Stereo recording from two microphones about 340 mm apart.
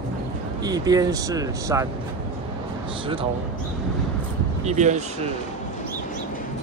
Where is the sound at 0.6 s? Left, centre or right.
Centre.